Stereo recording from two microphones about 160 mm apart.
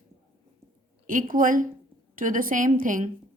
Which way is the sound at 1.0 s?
55° right (ahead or behind).